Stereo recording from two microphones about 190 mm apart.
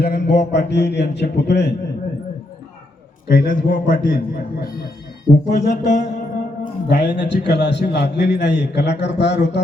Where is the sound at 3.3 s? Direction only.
45° left (ahead or behind).